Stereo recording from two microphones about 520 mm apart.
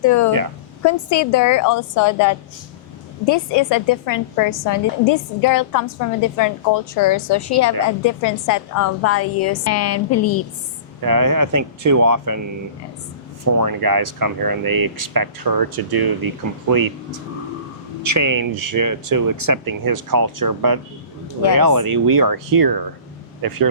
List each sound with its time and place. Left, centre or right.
0.0 s a woman's voice: left
11.0 s speech: right
13.4 s speech: right
18.0 s speech: right